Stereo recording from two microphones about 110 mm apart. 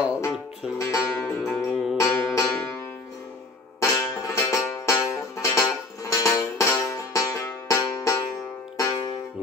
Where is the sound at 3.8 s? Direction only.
25° left (ahead or behind).